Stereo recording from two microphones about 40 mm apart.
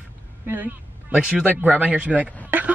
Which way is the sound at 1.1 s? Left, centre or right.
Right.